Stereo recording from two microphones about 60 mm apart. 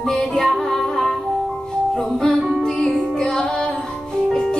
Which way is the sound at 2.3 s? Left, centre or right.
Centre.